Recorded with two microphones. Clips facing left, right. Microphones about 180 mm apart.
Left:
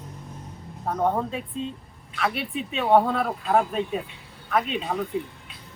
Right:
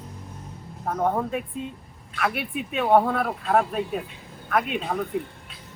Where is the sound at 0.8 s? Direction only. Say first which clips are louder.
Even; centre (ahead or behind).